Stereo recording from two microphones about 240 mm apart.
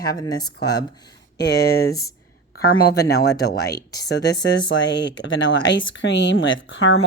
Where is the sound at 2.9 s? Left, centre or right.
Left.